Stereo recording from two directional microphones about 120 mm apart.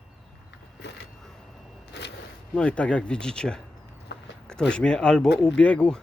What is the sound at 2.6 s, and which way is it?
Speech, 10° left (ahead or behind).